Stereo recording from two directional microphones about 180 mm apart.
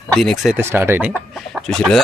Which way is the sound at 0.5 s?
15° right (ahead or behind).